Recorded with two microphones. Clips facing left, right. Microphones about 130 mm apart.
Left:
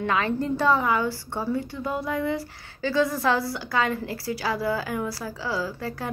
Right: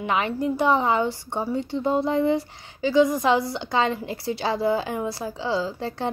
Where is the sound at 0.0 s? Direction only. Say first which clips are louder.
Right 1 dB; 20° right (ahead or behind).